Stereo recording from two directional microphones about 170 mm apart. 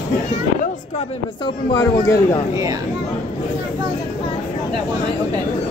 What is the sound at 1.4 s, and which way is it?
Speech, 20° left (ahead or behind).